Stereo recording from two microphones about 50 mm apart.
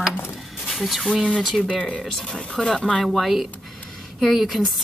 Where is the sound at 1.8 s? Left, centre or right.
Centre.